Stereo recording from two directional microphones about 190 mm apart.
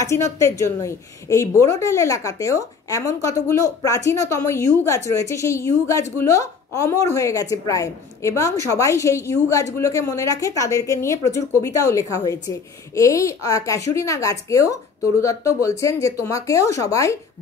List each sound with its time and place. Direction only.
0.0 s a woman's voice: 15° left (ahead or behind)